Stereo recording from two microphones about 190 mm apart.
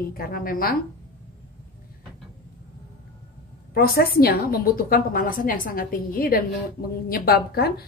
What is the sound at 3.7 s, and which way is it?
A woman's voice, 50° left (ahead or behind).